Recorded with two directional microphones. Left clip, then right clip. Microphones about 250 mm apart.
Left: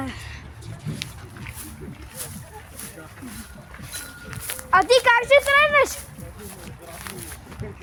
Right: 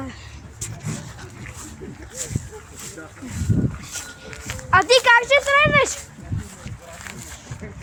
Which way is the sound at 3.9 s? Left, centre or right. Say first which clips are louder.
Left 1 dB; centre.